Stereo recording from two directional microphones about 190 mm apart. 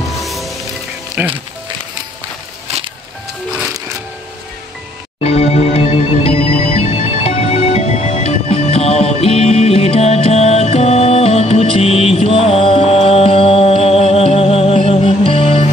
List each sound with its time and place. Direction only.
0.2 s music: centre (ahead or behind)
1.2 s speech: 10° right (ahead or behind)
5.2 s music: 30° left (ahead or behind)